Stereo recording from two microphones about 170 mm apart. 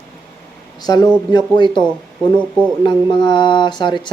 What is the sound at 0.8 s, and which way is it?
Speech, 25° left (ahead or behind).